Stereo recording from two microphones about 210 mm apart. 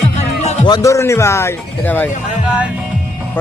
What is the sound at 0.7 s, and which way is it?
Speech, 15° left (ahead or behind).